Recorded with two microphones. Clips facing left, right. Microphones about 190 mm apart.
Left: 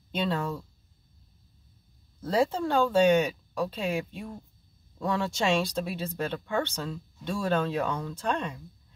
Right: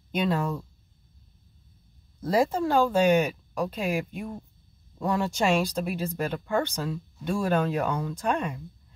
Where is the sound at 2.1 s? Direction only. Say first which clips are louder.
Right 2 dB; 10° right (ahead or behind).